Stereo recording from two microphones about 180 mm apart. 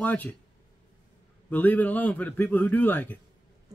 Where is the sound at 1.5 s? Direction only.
10° left (ahead or behind).